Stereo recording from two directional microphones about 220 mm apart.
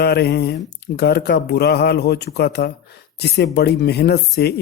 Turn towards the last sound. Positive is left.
turn(degrees=50)  # may be behind; listen again after turning